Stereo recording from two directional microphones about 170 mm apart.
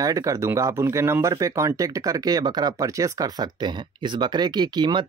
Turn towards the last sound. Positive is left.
turn(degrees=-25)  # may be behind; listen again after turning